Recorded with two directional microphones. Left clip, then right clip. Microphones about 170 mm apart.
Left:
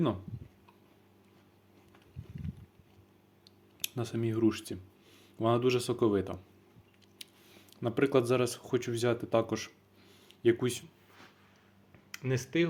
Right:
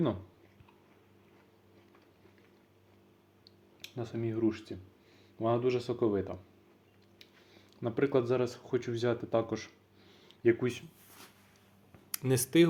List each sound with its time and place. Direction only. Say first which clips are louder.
3.8 s speech: left 3 dB; 30° left (ahead or behind)
10.2 s a sound: even; 10° left (ahead or behind)
12.2 s speech: right 3 dB; 30° right (ahead or behind)